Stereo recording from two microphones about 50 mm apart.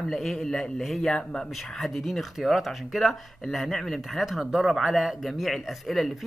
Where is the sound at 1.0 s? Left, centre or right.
Centre.